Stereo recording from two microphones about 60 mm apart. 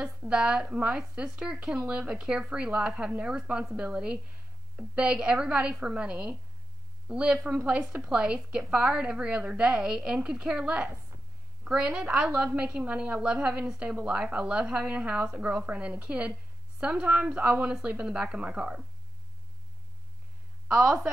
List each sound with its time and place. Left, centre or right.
0.3 s a woman's voice: centre
20.6 s a woman's voice: centre